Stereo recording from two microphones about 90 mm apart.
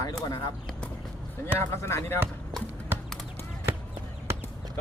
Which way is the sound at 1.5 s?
30° left (ahead or behind).